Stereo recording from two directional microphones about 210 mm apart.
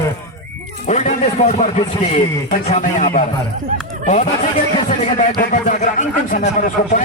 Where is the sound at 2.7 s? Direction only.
35° left (ahead or behind).